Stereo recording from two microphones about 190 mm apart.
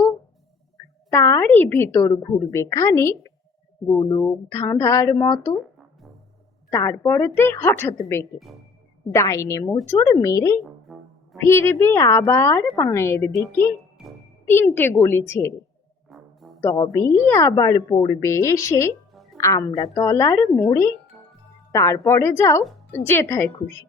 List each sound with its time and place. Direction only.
1.1 s speech: 15° left (ahead or behind)
5.5 s music: centre (ahead or behind)
6.7 s speech: 15° left (ahead or behind)
10.9 s music: centre (ahead or behind)
11.3 s speech: 15° left (ahead or behind)
16.0 s music: centre (ahead or behind)
16.6 s speech: 15° left (ahead or behind)